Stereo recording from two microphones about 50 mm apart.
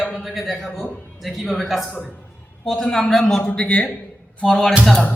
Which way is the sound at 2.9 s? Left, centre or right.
Centre.